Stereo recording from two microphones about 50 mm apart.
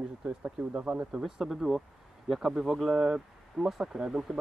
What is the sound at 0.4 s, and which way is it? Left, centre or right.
Speech, right.